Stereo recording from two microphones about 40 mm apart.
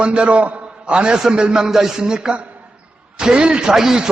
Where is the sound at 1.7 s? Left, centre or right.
Centre.